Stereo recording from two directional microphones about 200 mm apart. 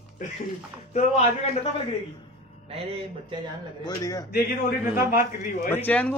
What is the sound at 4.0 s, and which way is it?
Speech, 15° left (ahead or behind).